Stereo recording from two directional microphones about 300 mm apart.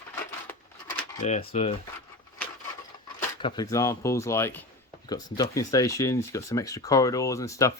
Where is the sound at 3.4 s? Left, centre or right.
Centre.